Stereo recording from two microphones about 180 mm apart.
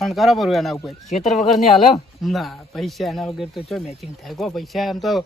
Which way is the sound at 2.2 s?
Centre (ahead or behind).